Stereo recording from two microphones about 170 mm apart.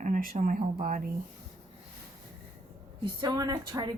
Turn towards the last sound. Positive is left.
turn(degrees=-25)  # may be behind; listen again after turning